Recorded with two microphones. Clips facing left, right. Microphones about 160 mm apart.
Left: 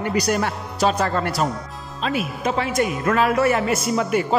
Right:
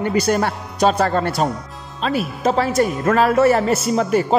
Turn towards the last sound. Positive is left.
turn(degrees=-35)  # may be behind; listen again after turning